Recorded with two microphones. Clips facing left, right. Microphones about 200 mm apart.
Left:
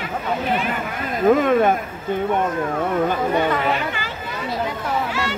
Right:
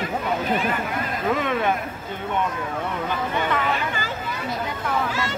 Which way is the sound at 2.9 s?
45° left (ahead or behind).